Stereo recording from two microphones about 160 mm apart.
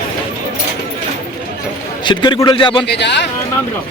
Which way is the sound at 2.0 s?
30° left (ahead or behind).